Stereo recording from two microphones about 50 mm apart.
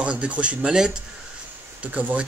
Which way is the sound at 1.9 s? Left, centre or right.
Right.